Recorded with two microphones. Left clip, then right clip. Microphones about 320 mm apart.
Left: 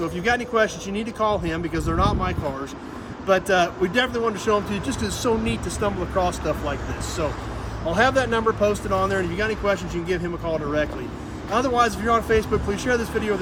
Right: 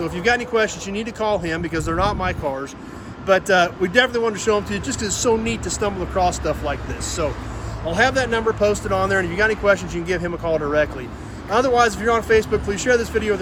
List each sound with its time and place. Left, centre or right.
0.2 s speech: centre
7.9 s speech: centre